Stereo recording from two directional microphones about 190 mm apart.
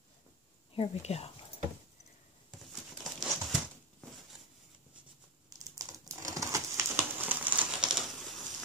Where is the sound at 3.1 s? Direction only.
5° left (ahead or behind).